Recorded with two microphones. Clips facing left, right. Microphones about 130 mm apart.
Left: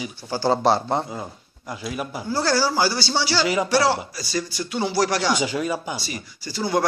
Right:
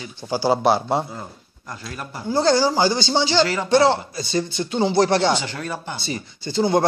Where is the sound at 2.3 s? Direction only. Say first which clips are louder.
Right 4 dB; 20° right (ahead or behind).